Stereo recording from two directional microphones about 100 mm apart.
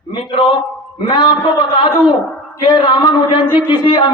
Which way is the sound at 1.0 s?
55° left (ahead or behind).